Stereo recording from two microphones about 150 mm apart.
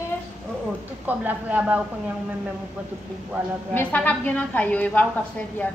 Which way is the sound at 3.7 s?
10° left (ahead or behind).